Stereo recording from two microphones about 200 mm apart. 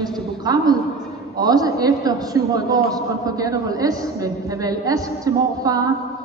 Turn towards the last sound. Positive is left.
turn(degrees=-20)  # may be behind; listen again after turning